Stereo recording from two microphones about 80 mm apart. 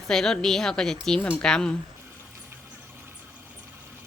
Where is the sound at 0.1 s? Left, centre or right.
Centre.